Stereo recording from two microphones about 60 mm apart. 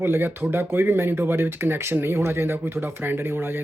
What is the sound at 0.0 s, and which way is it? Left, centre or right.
Speech, right.